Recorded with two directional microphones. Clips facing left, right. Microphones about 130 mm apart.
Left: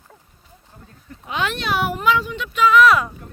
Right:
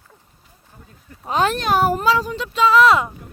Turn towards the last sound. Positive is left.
turn(degrees=-25)  # may be behind; listen again after turning